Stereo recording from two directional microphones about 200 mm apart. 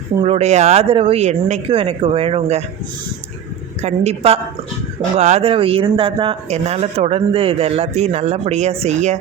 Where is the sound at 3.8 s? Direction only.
30° right (ahead or behind).